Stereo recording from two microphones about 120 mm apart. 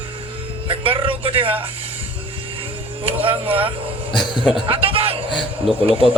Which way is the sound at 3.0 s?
50° right (ahead or behind).